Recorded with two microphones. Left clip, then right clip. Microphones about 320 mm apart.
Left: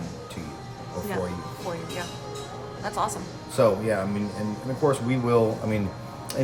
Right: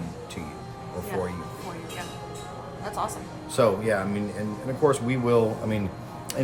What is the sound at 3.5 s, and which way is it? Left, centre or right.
Speech, centre.